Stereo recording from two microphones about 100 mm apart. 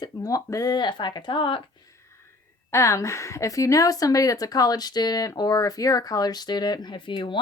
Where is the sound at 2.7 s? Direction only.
30° left (ahead or behind).